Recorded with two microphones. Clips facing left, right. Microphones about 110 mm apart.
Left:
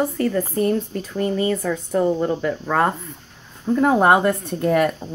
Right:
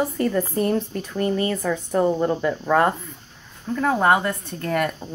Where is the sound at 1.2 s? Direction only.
20° left (ahead or behind).